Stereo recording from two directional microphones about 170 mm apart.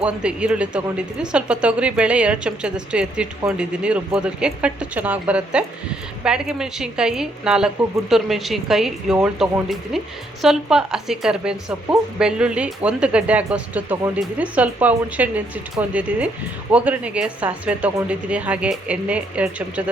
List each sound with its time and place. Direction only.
0.0 s speech: 5° right (ahead or behind)